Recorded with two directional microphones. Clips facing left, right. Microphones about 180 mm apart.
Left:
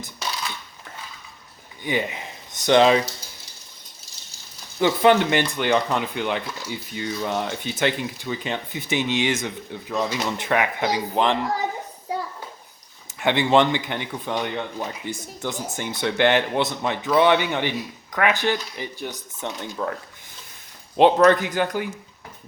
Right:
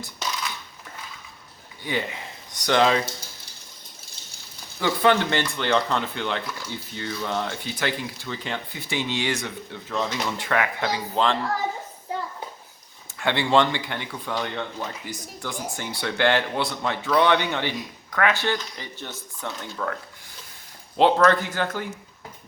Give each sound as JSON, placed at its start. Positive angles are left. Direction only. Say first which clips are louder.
{"t": 1.8, "sound": "speech", "louder": "left 3 dB", "side_deg": 20}
{"t": 4.8, "sound": "speech", "louder": "left 4 dB", "side_deg": 15}
{"t": 13.1, "sound": "speech", "louder": "left 3 dB", "side_deg": 20}